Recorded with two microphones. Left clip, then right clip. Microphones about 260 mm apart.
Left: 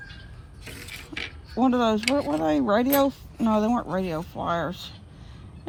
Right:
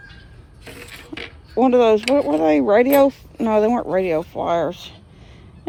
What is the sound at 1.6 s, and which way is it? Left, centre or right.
Speech, left.